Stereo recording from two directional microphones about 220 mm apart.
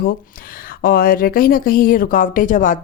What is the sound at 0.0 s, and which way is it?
Speech, 40° left (ahead or behind).